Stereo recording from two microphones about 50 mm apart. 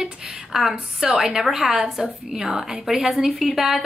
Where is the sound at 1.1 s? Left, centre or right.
Centre.